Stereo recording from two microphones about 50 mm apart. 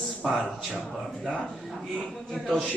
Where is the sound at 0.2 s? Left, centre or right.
Centre.